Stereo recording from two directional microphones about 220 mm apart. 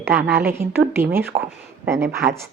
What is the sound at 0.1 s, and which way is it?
Speech, 45° right (ahead or behind).